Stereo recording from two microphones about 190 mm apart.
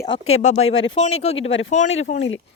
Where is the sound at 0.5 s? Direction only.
90° left.